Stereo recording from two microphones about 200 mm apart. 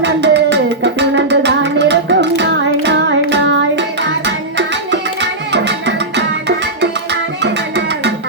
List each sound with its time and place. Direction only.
0.0 s music: 60° right (ahead or behind)